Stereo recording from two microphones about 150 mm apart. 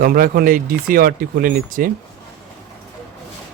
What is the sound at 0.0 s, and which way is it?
Speech, 75° right (ahead or behind).